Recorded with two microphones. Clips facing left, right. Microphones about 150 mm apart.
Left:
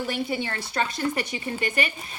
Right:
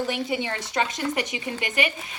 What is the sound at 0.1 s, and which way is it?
Speech, 15° right (ahead or behind).